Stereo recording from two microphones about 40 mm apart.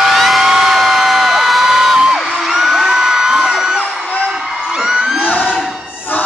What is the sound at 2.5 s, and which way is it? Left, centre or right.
Whoop, centre.